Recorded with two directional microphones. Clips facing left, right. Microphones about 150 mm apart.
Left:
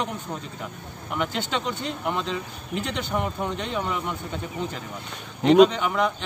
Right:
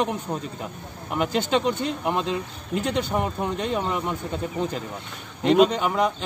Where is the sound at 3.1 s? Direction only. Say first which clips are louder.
Right 2 dB; 25° right (ahead or behind).